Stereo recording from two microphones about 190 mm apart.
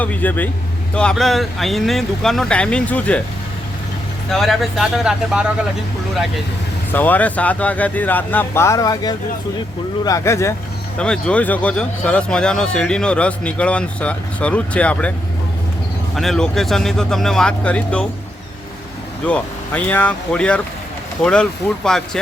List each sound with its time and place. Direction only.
0.0 s speech: 10° left (ahead or behind)
4.3 s speech: centre (ahead or behind)
6.9 s speech: 10° left (ahead or behind)
10.9 s speech: 5° left (ahead or behind)
16.1 s speech: centre (ahead or behind)
19.2 s speech: 5° left (ahead or behind)